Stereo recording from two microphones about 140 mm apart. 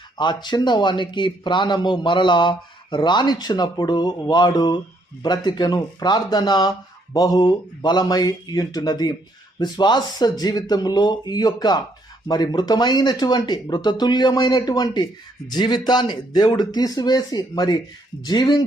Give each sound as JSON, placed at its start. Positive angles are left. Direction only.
{"t": 0.2, "sound": "a man's voice", "side_deg": 30}